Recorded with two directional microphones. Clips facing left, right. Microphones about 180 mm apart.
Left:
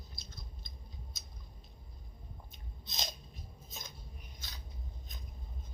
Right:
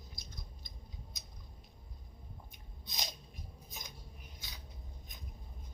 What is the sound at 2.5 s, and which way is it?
Biting, 15° right (ahead or behind).